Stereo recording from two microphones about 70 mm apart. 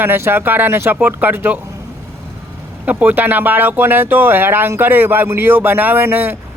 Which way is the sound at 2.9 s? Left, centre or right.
Right.